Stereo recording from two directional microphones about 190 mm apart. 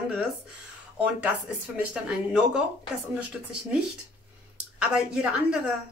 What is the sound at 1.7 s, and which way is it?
Speech, 5° right (ahead or behind).